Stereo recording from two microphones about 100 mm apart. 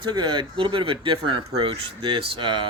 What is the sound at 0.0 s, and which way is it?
Speech, 50° right (ahead or behind).